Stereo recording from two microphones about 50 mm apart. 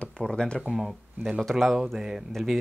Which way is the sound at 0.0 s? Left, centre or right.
Centre.